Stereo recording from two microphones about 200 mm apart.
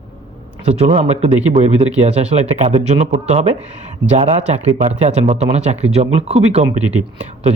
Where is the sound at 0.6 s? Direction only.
35° right (ahead or behind).